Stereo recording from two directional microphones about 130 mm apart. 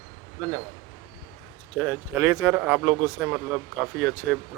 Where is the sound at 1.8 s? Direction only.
15° right (ahead or behind).